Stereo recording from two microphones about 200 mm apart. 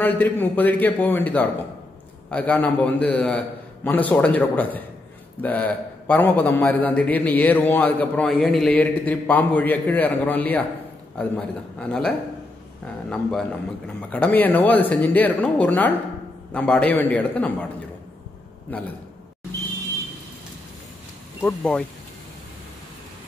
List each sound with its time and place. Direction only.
0.0 s a man's voice: 10° left (ahead or behind)
21.4 s a man's voice: 10° left (ahead or behind)